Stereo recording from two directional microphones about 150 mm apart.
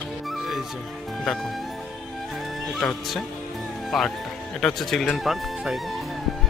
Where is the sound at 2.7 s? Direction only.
Centre (ahead or behind).